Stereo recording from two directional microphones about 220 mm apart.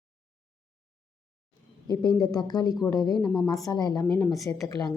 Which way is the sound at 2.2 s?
20° left (ahead or behind).